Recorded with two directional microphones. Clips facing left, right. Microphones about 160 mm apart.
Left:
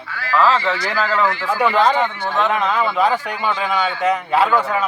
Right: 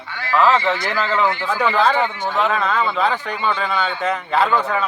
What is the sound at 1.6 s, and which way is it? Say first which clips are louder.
Speech: left 2 dB; 15° left (ahead or behind).